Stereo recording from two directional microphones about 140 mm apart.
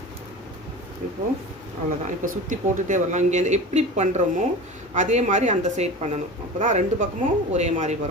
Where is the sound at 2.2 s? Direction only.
65° right (ahead or behind).